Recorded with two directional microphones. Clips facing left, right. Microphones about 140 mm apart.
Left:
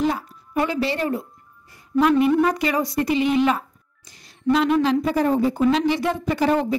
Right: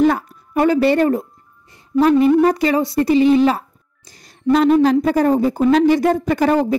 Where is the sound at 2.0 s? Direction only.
35° right (ahead or behind).